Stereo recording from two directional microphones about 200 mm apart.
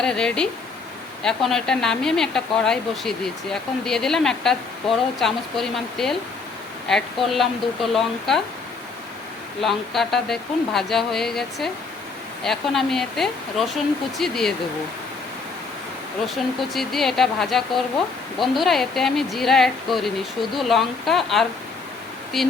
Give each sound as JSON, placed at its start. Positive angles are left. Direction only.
{"t": 0.0, "sound": "speech", "side_deg": 5}
{"t": 9.6, "sound": "speech", "side_deg": 0}
{"t": 16.2, "sound": "speech", "side_deg": 0}